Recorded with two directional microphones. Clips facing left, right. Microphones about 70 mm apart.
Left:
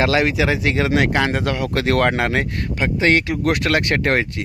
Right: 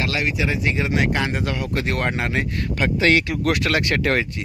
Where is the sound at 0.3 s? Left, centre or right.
Left.